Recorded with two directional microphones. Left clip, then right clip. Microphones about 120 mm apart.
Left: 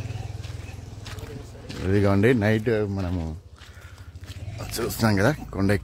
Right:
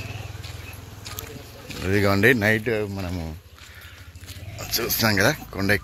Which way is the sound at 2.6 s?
35° left (ahead or behind).